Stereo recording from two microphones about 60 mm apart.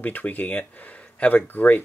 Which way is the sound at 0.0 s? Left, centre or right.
Left.